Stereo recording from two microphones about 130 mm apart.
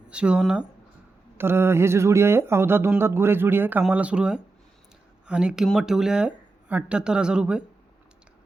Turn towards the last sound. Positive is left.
turn(degrees=-5)  # may be behind; listen again after turning